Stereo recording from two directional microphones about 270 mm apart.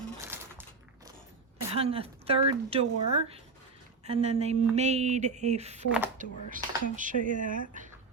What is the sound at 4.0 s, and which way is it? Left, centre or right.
Speech, right.